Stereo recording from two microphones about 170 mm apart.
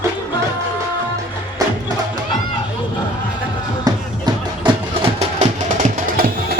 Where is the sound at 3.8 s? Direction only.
25° right (ahead or behind).